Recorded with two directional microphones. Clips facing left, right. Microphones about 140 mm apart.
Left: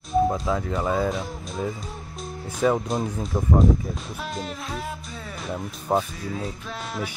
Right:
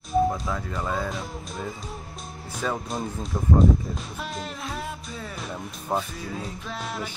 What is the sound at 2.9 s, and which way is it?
Speech, centre (ahead or behind).